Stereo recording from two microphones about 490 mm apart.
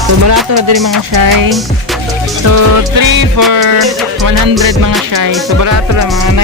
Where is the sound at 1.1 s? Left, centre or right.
Right.